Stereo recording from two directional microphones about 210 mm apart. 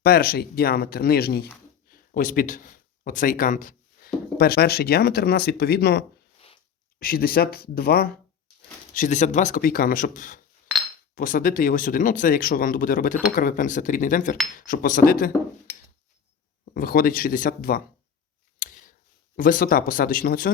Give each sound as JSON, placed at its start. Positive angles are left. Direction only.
{"t": 0.0, "sound": "speech", "side_deg": 45}
{"t": 9.0, "sound": "speech", "side_deg": 35}
{"t": 16.7, "sound": "speech", "side_deg": 45}
{"t": 18.6, "sound": "a sound", "side_deg": 40}
{"t": 19.4, "sound": "speech", "side_deg": 40}